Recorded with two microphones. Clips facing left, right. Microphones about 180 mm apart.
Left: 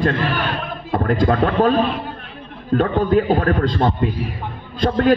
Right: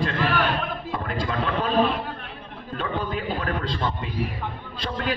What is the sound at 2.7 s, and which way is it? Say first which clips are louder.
A man's voice: left 12 dB; 50° left (ahead or behind).